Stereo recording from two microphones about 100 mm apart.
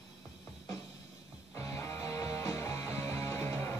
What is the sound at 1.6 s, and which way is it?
Music, 30° left (ahead or behind).